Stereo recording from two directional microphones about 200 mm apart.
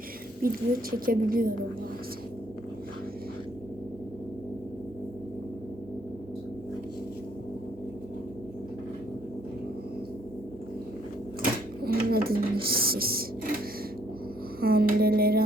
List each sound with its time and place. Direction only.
0.4 s a woman's voice: 45° right (ahead or behind)
11.8 s a sound: 50° right (ahead or behind)
14.6 s music: 50° right (ahead or behind)